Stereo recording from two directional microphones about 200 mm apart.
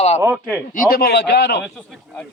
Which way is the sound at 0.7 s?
45° left (ahead or behind).